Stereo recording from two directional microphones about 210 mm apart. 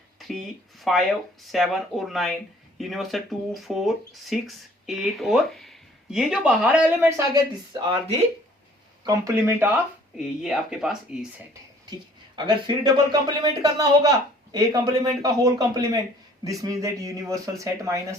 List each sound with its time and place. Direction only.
0.2 s speech: centre (ahead or behind)
7.7 s speech: 20° right (ahead or behind); by 11.3 s 5° right (ahead or behind)
12.5 s speech: 20° right (ahead or behind)